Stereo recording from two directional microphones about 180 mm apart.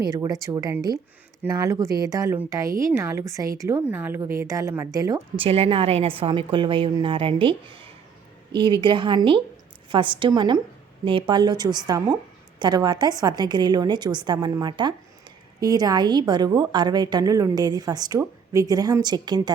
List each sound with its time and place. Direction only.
0.0 s a woman's voice: 20° right (ahead or behind)
5.5 s a woman's voice: 30° right (ahead or behind)